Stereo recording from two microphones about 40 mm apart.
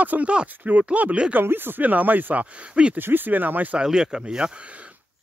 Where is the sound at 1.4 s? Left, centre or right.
Right.